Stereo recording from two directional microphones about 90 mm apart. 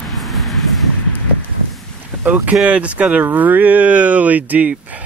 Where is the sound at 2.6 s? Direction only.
15° right (ahead or behind).